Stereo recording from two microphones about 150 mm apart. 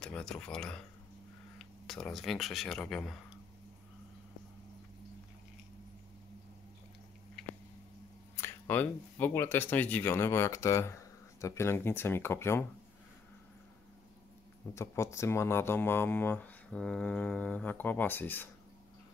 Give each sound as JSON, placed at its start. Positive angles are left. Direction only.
{"t": 0.0, "sound": "speech", "side_deg": 5}
{"t": 8.4, "sound": "speech", "side_deg": 10}
{"t": 14.7, "sound": "speech", "side_deg": 20}